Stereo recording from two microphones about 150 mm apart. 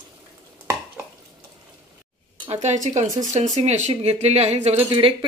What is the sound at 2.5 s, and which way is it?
Speech, 50° right (ahead or behind).